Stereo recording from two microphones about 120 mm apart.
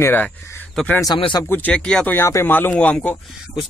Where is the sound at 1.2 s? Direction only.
40° left (ahead or behind).